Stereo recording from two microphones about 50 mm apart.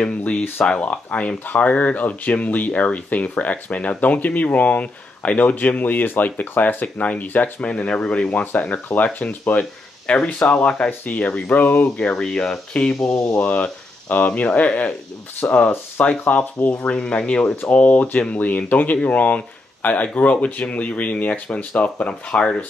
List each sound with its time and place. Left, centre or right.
0.2 s speech: left
7.6 s speech: left
8.5 s speech: left
12.1 s speech: centre
13.3 s speech: left
17.6 s speech: left